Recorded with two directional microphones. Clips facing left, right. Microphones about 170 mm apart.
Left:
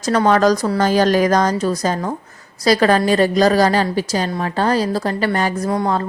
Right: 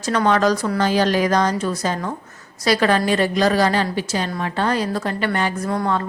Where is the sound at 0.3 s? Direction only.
40° left (ahead or behind).